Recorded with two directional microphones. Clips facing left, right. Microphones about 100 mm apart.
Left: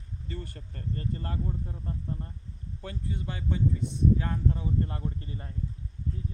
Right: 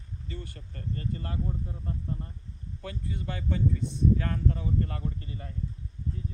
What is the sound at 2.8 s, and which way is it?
Speech, 30° left (ahead or behind).